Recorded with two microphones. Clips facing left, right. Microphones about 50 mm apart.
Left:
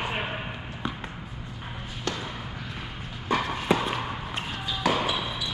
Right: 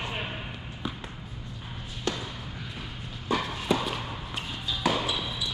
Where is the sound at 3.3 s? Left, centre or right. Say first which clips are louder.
Left 3 dB; left.